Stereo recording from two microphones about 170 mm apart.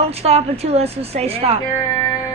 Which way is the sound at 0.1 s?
35° right (ahead or behind).